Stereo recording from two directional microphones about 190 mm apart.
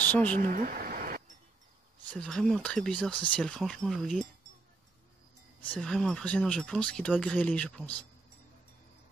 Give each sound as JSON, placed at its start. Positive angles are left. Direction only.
{"t": 0.4, "sound": "a sound", "side_deg": -45}
{"t": 2.0, "sound": "speech", "side_deg": 5}
{"t": 5.7, "sound": "speech", "side_deg": 5}